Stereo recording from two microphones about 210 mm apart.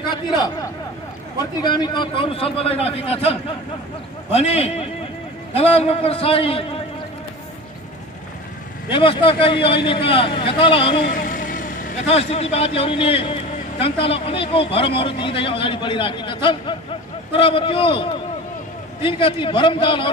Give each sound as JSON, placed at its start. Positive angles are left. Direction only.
{"t": 0.1, "sound": "speech", "side_deg": 20}
{"t": 8.9, "sound": "speech", "side_deg": 25}
{"t": 11.0, "sound": "speech", "side_deg": 40}